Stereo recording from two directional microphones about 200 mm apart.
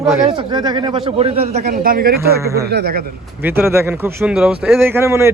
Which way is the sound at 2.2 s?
15° right (ahead or behind).